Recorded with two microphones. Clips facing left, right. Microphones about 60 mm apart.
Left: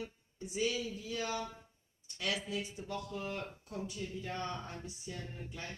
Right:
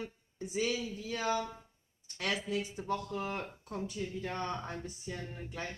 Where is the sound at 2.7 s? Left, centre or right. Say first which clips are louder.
Right 5 dB; right.